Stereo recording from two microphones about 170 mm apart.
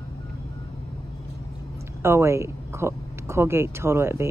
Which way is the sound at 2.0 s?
15° right (ahead or behind).